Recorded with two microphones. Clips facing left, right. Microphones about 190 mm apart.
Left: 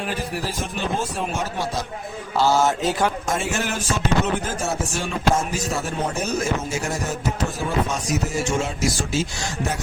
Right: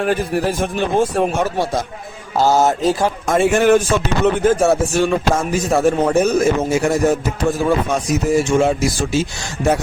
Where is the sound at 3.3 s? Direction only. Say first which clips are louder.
Right 12 dB; 55° right (ahead or behind).